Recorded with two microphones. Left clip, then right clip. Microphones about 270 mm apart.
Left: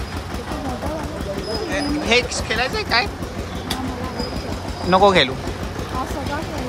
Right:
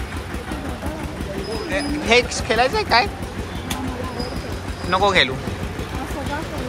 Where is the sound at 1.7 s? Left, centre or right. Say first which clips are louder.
Right 1 dB; centre.